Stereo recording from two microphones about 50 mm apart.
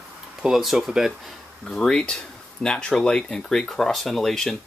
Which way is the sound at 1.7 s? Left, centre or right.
Centre.